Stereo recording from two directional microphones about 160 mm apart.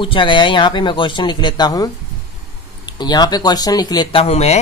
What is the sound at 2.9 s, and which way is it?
Speech, 25° left (ahead or behind).